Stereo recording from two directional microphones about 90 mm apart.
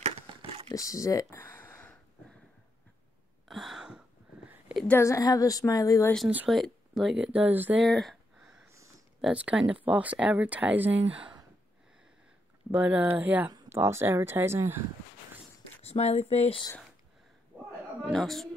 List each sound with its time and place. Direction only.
0.7 s a woman's voice: 35° left (ahead or behind)
1.4 s a sound: 20° left (ahead or behind)
3.4 s a sound: centre (ahead or behind)
4.8 s a woman's voice: 30° left (ahead or behind)
6.2 s speech: 10° right (ahead or behind)
7.4 s speech: 20° right (ahead or behind)
7.8 s a sound: centre (ahead or behind)
9.3 s speech: 15° right (ahead or behind)
12.7 s speech: 20° right (ahead or behind)
16.0 s speech: 90° left
18.1 s a woman's voice: 5° left (ahead or behind)